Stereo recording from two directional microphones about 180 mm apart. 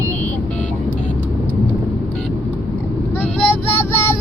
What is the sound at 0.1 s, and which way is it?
Vehicle, 10° left (ahead or behind).